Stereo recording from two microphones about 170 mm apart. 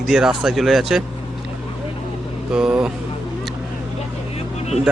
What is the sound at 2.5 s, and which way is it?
Speech, 5° right (ahead or behind).